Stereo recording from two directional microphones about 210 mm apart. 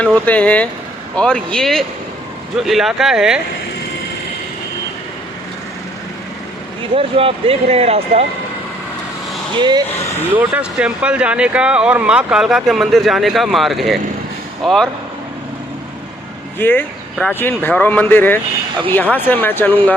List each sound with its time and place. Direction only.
0.0 s speech: 5° left (ahead or behind)
6.9 s speech: 25° right (ahead or behind)
9.6 s speech: 20° right (ahead or behind)
10.3 s speech: 5° right (ahead or behind)
16.6 s speech: 10° left (ahead or behind)